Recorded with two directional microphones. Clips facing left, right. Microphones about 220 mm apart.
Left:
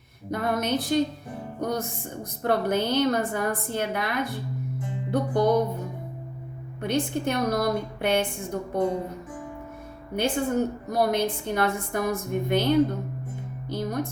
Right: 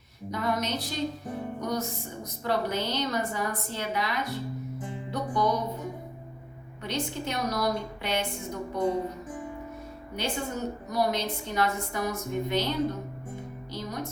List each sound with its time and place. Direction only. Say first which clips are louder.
0.3 s a woman's voice: left 3 dB; 55° left (ahead or behind)
2.4 s a woman's voice: left 5 dB; 55° left (ahead or behind)
6.8 s a woman's voice: left 6 dB; 55° left (ahead or behind)
10.2 s a woman's voice: left 8 dB; 55° left (ahead or behind)
13.7 s music: left 8 dB; 55° left (ahead or behind)